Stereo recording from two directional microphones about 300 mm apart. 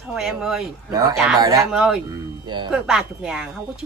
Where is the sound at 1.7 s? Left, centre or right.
Centre.